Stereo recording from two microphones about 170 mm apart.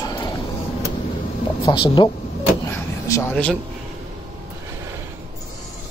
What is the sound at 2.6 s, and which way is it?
Vehicle, 20° left (ahead or behind).